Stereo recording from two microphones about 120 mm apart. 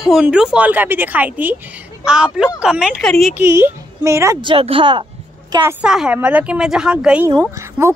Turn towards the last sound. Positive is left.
turn(degrees=-20)  # may be behind; listen again after turning